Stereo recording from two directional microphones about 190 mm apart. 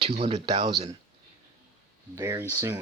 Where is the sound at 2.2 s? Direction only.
15° right (ahead or behind).